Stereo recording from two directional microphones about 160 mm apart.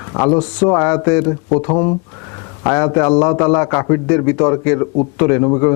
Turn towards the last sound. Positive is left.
turn(degrees=20)  # may be behind; listen again after turning